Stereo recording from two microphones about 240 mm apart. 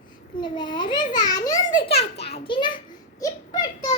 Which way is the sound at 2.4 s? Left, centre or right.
Left.